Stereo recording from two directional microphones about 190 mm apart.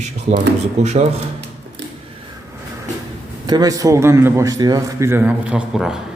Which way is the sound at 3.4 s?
20° right (ahead or behind).